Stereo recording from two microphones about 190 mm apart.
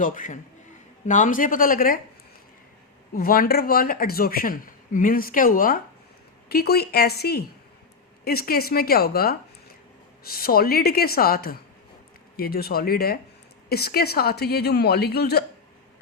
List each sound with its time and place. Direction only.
0.0 s speech: 40° left (ahead or behind)
3.2 s a woman's voice: 50° left (ahead or behind)